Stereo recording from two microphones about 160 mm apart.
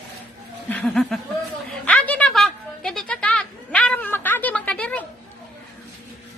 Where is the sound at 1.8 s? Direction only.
10° left (ahead or behind).